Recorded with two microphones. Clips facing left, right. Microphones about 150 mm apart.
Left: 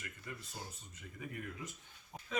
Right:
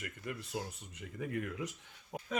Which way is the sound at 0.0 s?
65° right (ahead or behind).